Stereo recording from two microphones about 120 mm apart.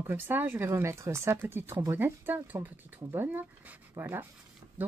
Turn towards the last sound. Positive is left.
turn(degrees=-20)  # may be behind; listen again after turning